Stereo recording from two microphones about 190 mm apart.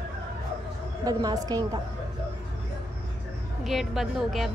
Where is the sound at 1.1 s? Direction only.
20° right (ahead or behind).